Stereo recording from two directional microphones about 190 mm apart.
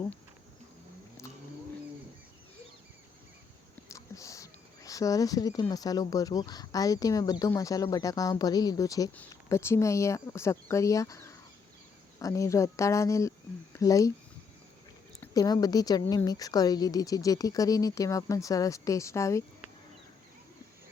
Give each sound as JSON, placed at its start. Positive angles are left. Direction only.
{"t": 3.8, "sound": "speech", "side_deg": 15}
{"t": 15.2, "sound": "a woman's voice", "side_deg": 20}